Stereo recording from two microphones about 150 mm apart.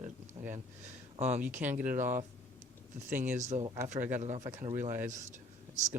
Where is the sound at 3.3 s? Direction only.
50° right (ahead or behind).